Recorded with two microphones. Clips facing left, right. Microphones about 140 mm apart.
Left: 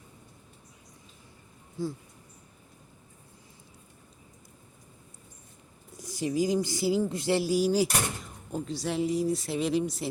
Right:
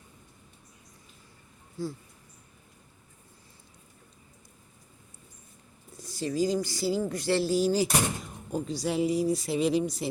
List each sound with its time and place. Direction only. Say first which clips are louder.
6.0 s speech: even; 15° left (ahead or behind); by 10.1 s centre (ahead or behind)